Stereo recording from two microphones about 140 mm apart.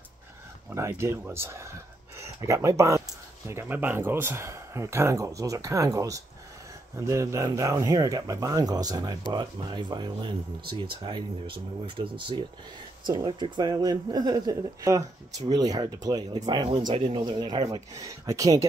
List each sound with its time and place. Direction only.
0.7 s speech: 20° right (ahead or behind)